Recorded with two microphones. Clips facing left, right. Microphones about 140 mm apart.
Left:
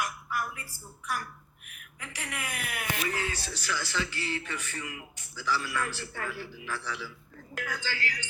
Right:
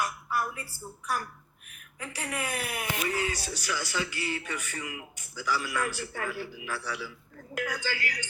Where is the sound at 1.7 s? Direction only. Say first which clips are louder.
Right 4 dB; 35° right (ahead or behind).